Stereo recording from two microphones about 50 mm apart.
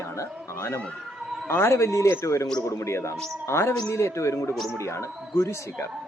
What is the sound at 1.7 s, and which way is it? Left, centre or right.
Speech, left.